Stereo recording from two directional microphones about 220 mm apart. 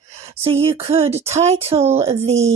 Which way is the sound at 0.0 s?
30° right (ahead or behind).